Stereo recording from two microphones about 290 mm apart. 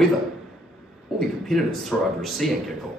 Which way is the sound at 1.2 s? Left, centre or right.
Centre.